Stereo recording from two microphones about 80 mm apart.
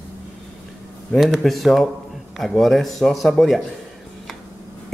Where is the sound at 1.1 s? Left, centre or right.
Centre.